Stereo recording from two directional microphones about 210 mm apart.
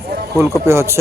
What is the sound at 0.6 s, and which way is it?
Speech, 15° right (ahead or behind).